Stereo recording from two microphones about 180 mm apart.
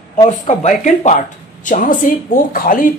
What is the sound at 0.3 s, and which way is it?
Speech, 40° left (ahead or behind).